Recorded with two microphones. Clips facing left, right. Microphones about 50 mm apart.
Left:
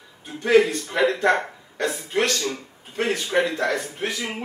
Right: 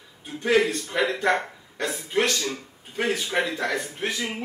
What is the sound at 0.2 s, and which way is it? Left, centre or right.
A man's voice, centre.